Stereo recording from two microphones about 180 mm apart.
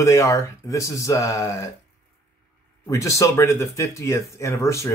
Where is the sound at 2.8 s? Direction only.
15° left (ahead or behind).